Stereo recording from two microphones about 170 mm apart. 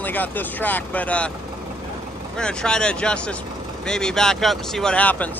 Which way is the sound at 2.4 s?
5° left (ahead or behind).